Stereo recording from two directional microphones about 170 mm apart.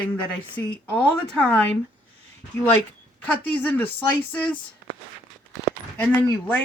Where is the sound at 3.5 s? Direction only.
10° left (ahead or behind).